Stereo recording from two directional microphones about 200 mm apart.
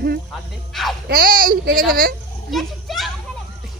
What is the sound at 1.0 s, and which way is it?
Speech, 45° right (ahead or behind).